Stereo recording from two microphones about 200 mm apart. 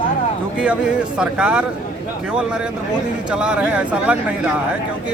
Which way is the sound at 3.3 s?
5° right (ahead or behind).